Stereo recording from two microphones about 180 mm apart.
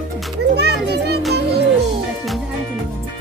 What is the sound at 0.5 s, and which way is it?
Children playing, 65° right (ahead or behind).